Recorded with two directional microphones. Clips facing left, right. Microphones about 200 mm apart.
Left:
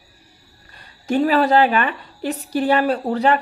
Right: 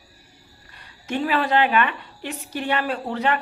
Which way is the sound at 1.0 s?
40° left (ahead or behind).